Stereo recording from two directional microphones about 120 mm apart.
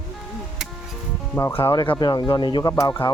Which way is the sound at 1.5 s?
50° left (ahead or behind).